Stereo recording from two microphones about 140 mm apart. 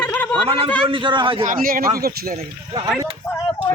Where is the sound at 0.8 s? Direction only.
35° right (ahead or behind).